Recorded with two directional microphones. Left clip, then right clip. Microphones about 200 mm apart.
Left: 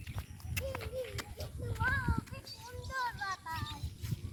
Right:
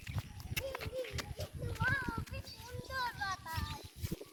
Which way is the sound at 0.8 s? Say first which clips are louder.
Left 1 dB; 10° right (ahead or behind).